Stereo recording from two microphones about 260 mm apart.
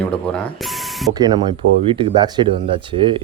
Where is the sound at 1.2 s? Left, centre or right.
Centre.